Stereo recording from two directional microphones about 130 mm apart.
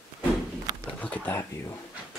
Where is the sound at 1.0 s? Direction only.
10° left (ahead or behind).